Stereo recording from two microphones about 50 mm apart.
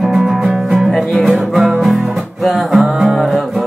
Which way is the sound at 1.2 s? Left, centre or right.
Centre.